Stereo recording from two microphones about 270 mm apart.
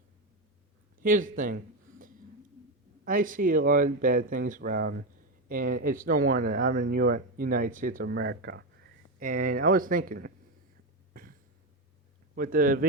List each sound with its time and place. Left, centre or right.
0.9 s a sound: right
3.0 s speech: right
11.1 s cough: right
12.3 s speech: right